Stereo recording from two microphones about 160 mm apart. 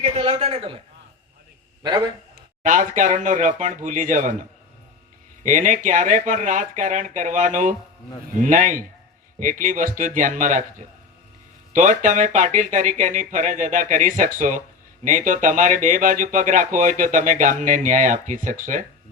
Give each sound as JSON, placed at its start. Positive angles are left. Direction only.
{"t": 0.0, "sound": "a man's voice", "side_deg": -35}
{"t": 1.8, "sound": "a man's voice", "side_deg": -25}
{"t": 2.6, "sound": "speech", "side_deg": -55}